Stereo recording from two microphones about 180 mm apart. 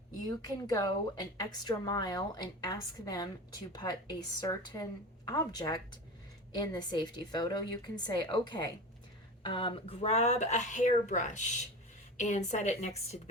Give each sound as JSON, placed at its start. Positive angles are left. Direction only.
{"t": 0.3, "sound": "a woman's voice", "side_deg": 20}